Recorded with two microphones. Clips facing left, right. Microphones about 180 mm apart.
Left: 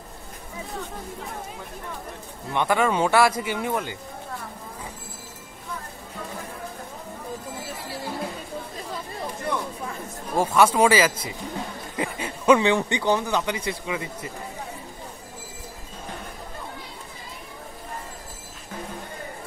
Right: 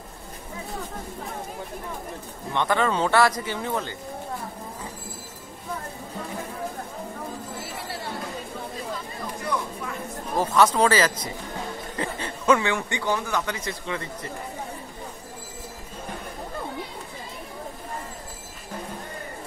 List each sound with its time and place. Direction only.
2.5 s speech: 10° left (ahead or behind)
10.3 s speech: 10° left (ahead or behind)